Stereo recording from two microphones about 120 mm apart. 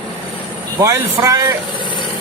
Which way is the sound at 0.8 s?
25° right (ahead or behind).